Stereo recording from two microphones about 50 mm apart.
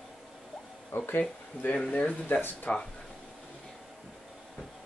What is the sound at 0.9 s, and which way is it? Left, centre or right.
Speech, left.